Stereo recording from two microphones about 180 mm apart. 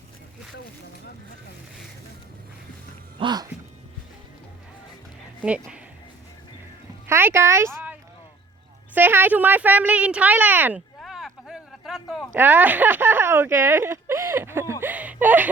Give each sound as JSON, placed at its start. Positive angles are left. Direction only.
{"t": 3.2, "sound": "speech", "side_deg": -25}
{"t": 5.4, "sound": "speech", "side_deg": -5}
{"t": 7.1, "sound": "speech", "side_deg": -15}
{"t": 9.0, "sound": "speech", "side_deg": -10}
{"t": 11.0, "sound": "a sound", "side_deg": 0}